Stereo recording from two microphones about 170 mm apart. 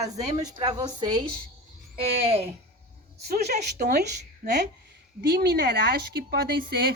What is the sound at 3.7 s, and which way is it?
Speech, 70° right (ahead or behind).